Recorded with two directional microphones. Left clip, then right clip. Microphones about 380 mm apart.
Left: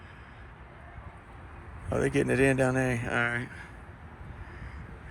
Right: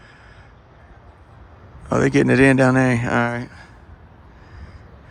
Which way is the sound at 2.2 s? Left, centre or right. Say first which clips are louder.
Right 10 dB; right.